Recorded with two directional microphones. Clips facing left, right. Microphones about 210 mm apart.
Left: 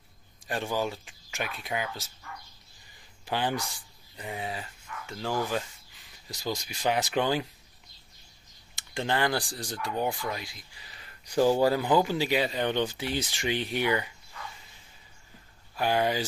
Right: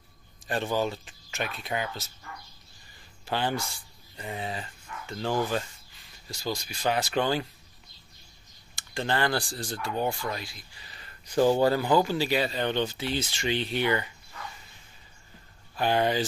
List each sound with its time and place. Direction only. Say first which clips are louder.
0.5 s speech: right 2 dB; 10° left (ahead or behind)
3.3 s speech: right 1 dB; 15° left (ahead or behind)
8.7 s speech: even; 15° left (ahead or behind)
15.7 s speech: right 1 dB; 10° left (ahead or behind)